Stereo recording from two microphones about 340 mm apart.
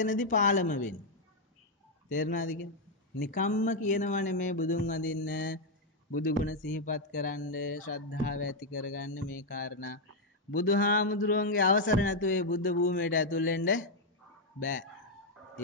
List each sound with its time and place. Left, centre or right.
0.0 s speech: left
2.0 s speech: left
8.1 s speech: left
9.5 s speech: left